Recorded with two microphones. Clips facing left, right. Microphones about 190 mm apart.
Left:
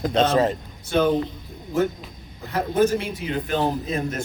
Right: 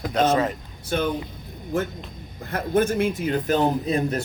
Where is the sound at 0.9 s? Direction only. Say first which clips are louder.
Left 5 dB; 50° right (ahead or behind).